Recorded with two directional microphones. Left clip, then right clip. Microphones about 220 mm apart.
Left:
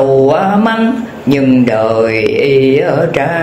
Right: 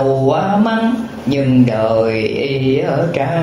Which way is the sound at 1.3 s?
30° left (ahead or behind).